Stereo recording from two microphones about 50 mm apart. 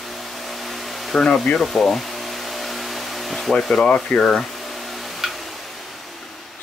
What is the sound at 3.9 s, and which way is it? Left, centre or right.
Speech, centre.